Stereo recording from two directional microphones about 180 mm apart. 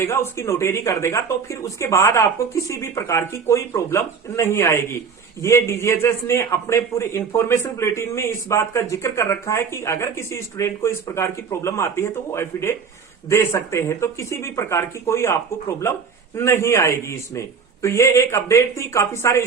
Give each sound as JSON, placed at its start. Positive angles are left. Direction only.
{"t": 0.0, "sound": "a man's voice", "side_deg": 15}